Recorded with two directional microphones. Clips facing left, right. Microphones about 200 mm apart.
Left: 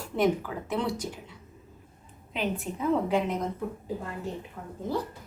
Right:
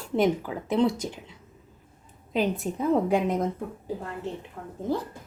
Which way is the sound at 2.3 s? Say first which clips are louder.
Right 5 dB; 40° right (ahead or behind).